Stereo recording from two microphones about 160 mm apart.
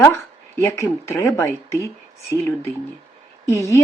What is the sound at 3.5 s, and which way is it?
Speech, 20° left (ahead or behind).